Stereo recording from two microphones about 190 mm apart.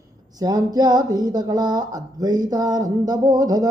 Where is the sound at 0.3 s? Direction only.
20° right (ahead or behind).